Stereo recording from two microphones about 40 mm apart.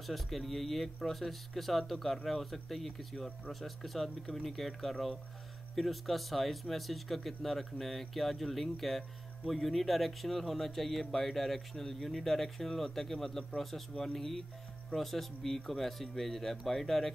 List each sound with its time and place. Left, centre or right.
0.0 s speech: centre